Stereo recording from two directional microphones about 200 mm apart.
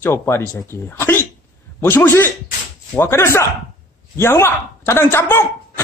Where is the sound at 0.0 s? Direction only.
15° left (ahead or behind).